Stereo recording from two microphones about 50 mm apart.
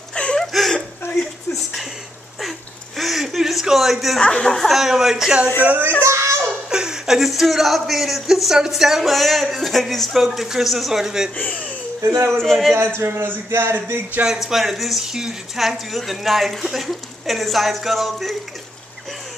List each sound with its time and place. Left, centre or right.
0.1 s a sound: centre
0.5 s a sound: centre
3.0 s chuckle: centre
4.2 s speech: centre
4.5 s speech: centre
4.7 s a man's voice: centre
5.6 s speech: right
6.0 s a sound: right
6.7 s speech: centre
12.4 s speech: centre
12.7 s speech: right
14.2 s speech: centre